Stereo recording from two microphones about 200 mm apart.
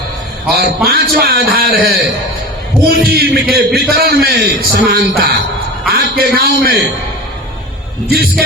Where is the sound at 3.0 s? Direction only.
50° right (ahead or behind).